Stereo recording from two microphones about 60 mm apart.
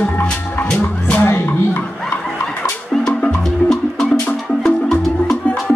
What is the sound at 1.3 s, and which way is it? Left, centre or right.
Music, left.